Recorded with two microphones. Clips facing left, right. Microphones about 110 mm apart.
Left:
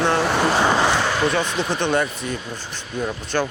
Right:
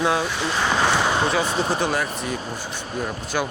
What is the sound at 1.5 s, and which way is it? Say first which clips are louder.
Speech: right 1 dB; 35° right (ahead or behind).